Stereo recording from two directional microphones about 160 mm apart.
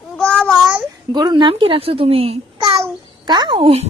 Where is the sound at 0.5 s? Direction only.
5° right (ahead or behind).